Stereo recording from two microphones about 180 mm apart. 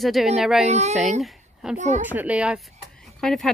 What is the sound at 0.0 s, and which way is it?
Speech, centre (ahead or behind).